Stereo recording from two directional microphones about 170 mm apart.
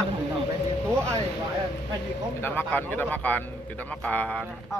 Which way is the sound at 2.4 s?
10° left (ahead or behind).